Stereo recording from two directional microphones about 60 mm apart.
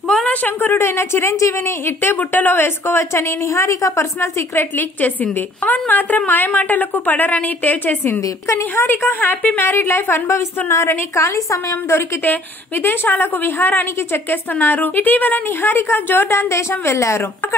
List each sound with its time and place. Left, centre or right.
0.2 s a sound: left
0.8 s a woman's voice: left
4.7 s a woman's voice: left
8.2 s a woman's voice: left
8.7 s a woman's voice: left
9.8 s a woman's voice: left
10.3 s a woman's voice: left
11.9 s a woman's voice: left